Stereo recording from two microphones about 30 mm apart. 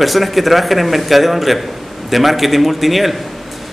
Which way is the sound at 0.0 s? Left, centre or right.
Centre.